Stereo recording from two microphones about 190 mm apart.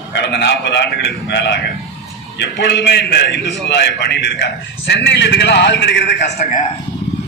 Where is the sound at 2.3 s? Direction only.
65° left (ahead or behind).